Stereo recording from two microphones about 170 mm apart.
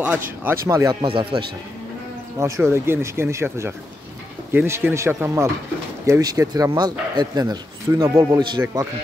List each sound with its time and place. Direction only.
0.4 s speech: 15° right (ahead or behind)
1.0 s speech: 30° right (ahead or behind)
2.3 s speech: 15° right (ahead or behind)